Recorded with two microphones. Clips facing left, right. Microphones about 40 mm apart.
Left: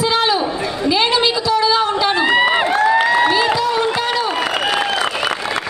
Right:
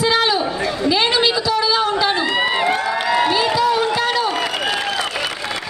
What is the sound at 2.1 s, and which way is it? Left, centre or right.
Run, left.